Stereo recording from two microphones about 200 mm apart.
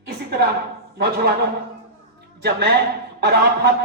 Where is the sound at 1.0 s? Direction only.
50° right (ahead or behind).